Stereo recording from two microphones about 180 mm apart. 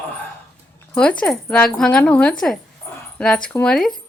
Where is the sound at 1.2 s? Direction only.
5° left (ahead or behind).